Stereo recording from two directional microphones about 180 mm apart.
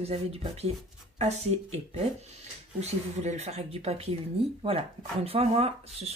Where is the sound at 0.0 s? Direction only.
35° right (ahead or behind).